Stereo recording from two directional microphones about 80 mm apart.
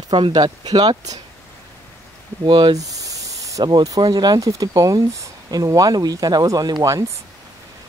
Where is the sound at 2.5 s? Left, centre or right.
Right.